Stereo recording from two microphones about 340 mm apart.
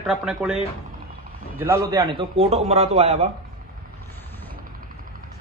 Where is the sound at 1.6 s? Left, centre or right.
Centre.